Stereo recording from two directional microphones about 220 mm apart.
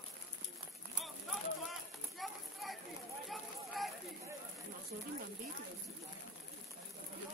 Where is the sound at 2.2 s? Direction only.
Centre (ahead or behind).